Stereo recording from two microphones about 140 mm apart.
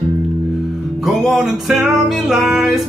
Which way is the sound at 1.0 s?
Centre (ahead or behind).